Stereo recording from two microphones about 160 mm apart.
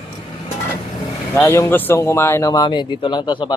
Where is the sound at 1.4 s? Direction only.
15° left (ahead or behind).